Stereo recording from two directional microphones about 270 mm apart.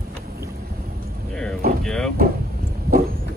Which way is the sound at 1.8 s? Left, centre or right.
Centre.